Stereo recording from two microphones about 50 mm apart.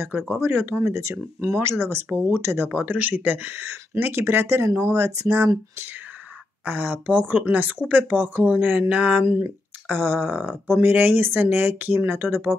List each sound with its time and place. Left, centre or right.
0.3 s speech: right
2.7 s speech: right
3.5 s speech: right
4.6 s speech: right
5.3 s speech: right
6.6 s speech: right
9.2 s speech: right